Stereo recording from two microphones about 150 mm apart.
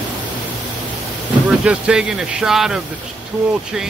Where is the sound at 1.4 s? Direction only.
5° right (ahead or behind).